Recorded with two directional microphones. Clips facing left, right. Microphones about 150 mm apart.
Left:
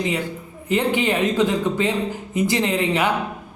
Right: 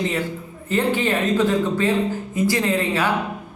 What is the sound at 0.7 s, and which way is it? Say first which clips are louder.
A woman's voice: even; 15° left (ahead or behind).